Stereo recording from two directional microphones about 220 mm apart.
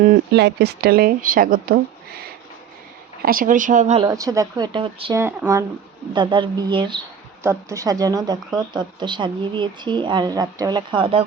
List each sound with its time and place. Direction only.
0.0 s speech: 35° right (ahead or behind)
0.4 s speech: 50° right (ahead or behind)
3.2 s speech: 40° right (ahead or behind)
4.0 s speech: 15° right (ahead or behind)
5.1 s speech: 10° right (ahead or behind)